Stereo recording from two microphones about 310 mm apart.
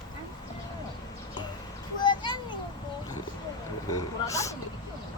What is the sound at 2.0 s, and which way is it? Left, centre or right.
Children playing, centre.